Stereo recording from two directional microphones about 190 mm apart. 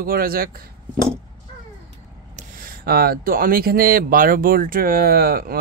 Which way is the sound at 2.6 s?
55° right (ahead or behind).